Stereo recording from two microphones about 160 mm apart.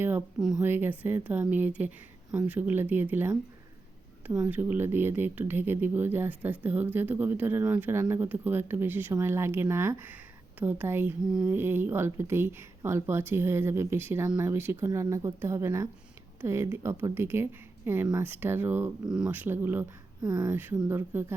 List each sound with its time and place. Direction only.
0.6 s speech: 10° right (ahead or behind)
4.4 s speech: 10° right (ahead or behind)
14.5 s speech: 15° right (ahead or behind)
20.5 s speech: 10° right (ahead or behind)